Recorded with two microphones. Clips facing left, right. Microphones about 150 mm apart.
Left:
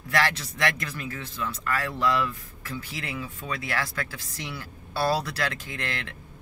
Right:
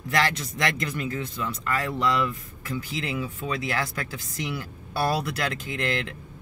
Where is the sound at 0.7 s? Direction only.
20° right (ahead or behind).